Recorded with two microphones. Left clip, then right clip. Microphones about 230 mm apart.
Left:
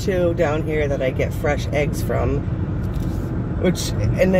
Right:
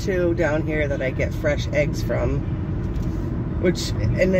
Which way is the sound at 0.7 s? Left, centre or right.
Centre.